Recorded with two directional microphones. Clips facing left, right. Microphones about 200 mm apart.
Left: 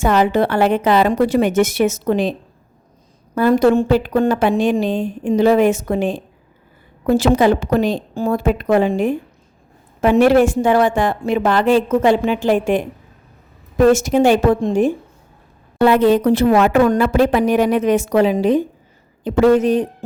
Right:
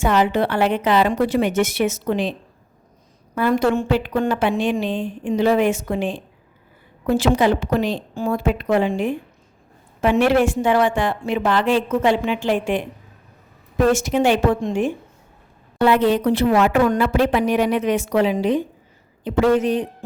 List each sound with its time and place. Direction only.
0.0 s a woman's voice: 45° left (ahead or behind)
3.3 s a woman's voice: 40° left (ahead or behind)